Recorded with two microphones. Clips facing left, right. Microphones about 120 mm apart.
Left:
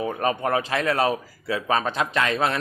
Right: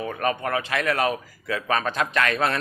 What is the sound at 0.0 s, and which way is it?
Speech, 25° left (ahead or behind).